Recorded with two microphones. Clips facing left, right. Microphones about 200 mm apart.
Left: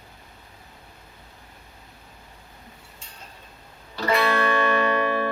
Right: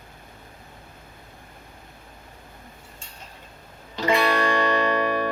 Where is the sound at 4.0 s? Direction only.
15° right (ahead or behind).